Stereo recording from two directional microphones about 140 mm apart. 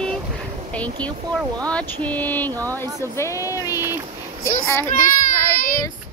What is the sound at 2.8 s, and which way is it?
Speech, 25° right (ahead or behind).